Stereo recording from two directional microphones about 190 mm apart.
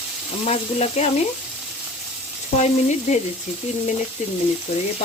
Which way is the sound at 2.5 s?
35° left (ahead or behind).